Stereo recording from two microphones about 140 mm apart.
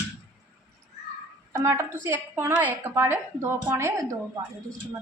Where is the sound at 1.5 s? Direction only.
20° right (ahead or behind).